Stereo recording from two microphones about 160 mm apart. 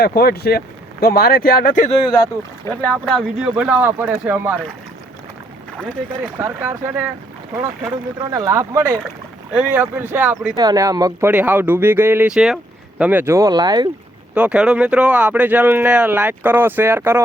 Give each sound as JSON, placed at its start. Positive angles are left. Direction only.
{"t": 0.0, "sound": "speech", "side_deg": 75}
{"t": 2.1, "sound": "speech", "side_deg": 25}
{"t": 2.8, "sound": "speech", "side_deg": 5}
{"t": 6.4, "sound": "speech", "side_deg": -15}
{"t": 8.2, "sound": "speech", "side_deg": -20}
{"t": 10.5, "sound": "speech", "side_deg": -25}
{"t": 14.3, "sound": "speech", "side_deg": -5}